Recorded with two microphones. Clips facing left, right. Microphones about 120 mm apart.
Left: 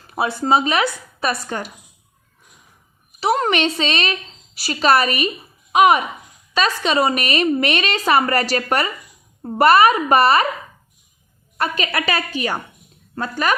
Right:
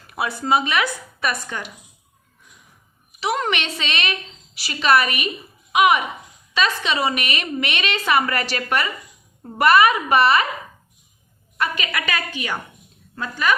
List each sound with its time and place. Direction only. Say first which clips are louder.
0.1 s speech: left 3 dB; 30° left (ahead or behind)
3.2 s speech: left 5 dB; 35° left (ahead or behind)
11.5 s speech: left 3 dB; 35° left (ahead or behind)